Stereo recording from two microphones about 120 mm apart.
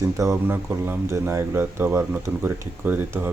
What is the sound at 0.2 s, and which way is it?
Speech, 20° right (ahead or behind).